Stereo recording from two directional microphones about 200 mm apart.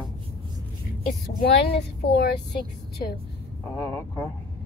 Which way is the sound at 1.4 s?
55° left (ahead or behind).